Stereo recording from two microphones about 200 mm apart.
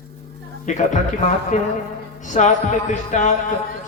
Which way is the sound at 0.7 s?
40° left (ahead or behind).